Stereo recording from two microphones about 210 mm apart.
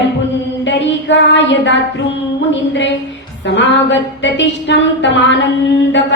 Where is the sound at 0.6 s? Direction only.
60° left (ahead or behind).